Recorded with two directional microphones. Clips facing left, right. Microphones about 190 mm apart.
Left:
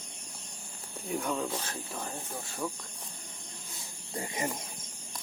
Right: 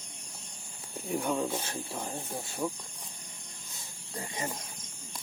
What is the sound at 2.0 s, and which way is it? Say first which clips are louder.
Speech: right 2 dB; 15° right (ahead or behind).